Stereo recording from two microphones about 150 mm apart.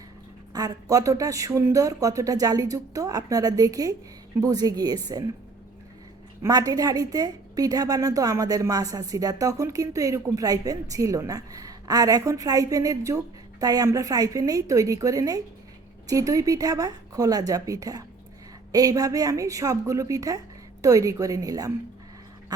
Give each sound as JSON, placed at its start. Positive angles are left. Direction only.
{"t": 0.5, "sound": "a woman's voice", "side_deg": -25}
{"t": 6.4, "sound": "a woman's voice", "side_deg": -25}